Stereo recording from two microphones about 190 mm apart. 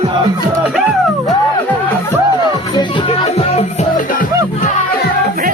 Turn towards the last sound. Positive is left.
turn(degrees=30)  # may be behind; listen again after turning